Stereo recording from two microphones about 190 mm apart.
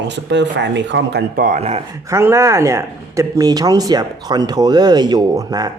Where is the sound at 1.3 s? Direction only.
40° right (ahead or behind).